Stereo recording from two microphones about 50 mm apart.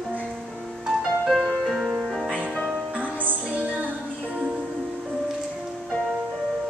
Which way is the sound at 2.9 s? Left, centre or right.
Right.